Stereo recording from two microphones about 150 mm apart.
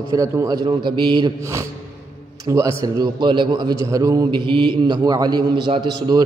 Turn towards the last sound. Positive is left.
turn(degrees=-25)  # may be behind; listen again after turning